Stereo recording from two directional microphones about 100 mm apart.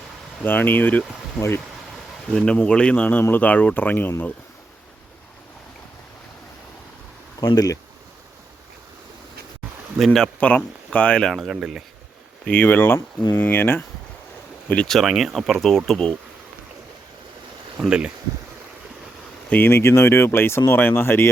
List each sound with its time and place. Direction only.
0.4 s speech: 20° left (ahead or behind)
2.3 s speech: 10° left (ahead or behind)
7.4 s speech: 40° left (ahead or behind)
10.0 s speech: 5° left (ahead or behind)
12.5 s speech: 20° left (ahead or behind)
14.7 s speech: 10° left (ahead or behind)
17.7 s speech: 10° right (ahead or behind)
19.5 s speech: 20° left (ahead or behind)